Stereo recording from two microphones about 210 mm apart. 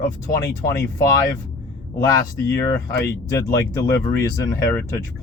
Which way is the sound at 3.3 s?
15° left (ahead or behind).